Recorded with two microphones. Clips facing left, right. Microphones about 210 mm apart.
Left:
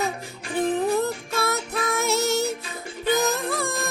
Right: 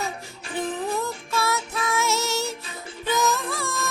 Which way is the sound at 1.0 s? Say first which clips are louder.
Left 1 dB; 60° left (ahead or behind).